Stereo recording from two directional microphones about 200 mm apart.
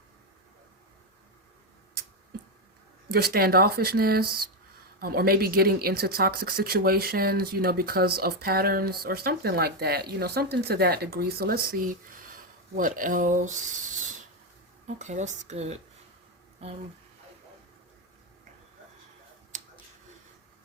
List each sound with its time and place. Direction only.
3.1 s speech: 50° right (ahead or behind)
14.8 s speech: 35° right (ahead or behind)